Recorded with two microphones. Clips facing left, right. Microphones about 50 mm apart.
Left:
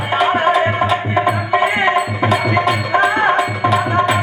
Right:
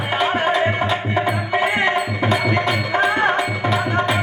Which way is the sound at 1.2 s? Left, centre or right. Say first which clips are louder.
Left 5 dB; centre.